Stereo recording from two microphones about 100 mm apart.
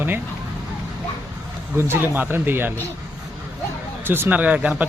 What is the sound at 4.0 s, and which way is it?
Speech, 20° right (ahead or behind).